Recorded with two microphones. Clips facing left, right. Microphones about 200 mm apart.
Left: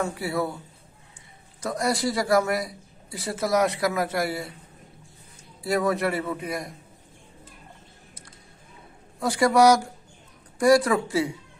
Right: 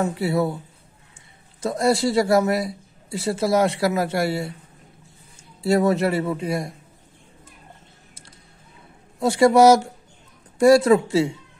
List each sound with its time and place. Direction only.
0.1 s a man's voice: 25° right (ahead or behind)
1.6 s a man's voice: 25° right (ahead or behind)
5.6 s a man's voice: 25° right (ahead or behind)
9.2 s a man's voice: 25° right (ahead or behind)